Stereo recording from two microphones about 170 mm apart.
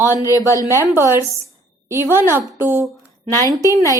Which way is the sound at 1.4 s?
15° right (ahead or behind).